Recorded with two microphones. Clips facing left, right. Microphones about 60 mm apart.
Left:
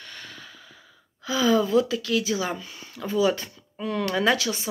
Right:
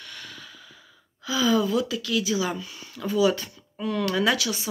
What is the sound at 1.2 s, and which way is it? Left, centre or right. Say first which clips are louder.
Speech: left 1 dB; left.